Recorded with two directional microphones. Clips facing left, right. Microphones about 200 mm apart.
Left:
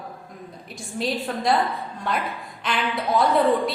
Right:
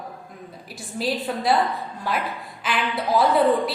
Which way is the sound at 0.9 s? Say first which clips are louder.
Right 1 dB; 5° right (ahead or behind).